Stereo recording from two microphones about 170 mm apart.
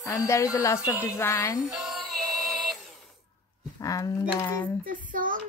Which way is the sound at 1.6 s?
Centre (ahead or behind).